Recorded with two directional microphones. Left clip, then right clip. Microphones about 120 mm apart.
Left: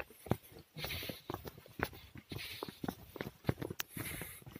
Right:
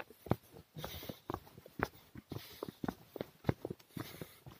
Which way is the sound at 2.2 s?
60° right (ahead or behind).